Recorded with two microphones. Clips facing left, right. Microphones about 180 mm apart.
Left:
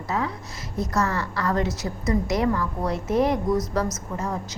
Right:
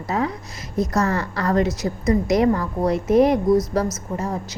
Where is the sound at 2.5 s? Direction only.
45° right (ahead or behind).